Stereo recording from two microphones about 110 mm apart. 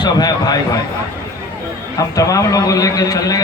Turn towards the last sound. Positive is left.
turn(degrees=30)  # may be behind; listen again after turning